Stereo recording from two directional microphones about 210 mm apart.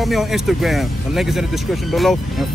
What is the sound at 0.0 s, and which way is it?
Speech, centre (ahead or behind).